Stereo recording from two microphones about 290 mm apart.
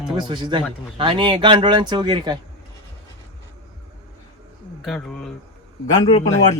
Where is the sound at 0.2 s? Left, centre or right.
Centre.